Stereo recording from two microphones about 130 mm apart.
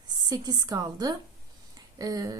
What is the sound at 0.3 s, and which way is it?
A woman's voice, 30° right (ahead or behind).